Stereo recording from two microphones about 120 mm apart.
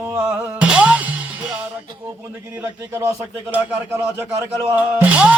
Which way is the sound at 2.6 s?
20° right (ahead or behind).